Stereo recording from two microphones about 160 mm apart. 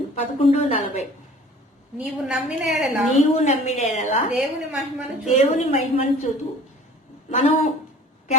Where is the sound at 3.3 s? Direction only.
45° left (ahead or behind).